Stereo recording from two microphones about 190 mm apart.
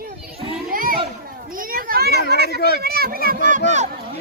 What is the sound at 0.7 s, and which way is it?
Children playing, 50° right (ahead or behind).